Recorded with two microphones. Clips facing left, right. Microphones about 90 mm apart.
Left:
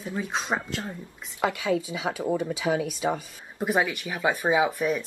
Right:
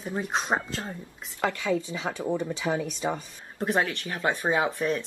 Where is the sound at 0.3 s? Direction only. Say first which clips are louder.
Right 2 dB; centre (ahead or behind).